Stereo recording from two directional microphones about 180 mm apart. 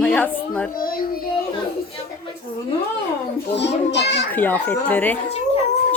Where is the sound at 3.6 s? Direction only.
75° left (ahead or behind).